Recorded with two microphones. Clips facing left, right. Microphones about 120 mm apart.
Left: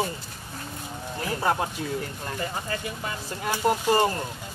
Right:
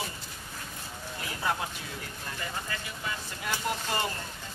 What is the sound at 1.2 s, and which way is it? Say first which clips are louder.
Speech: left 7 dB; 45° left (ahead or behind).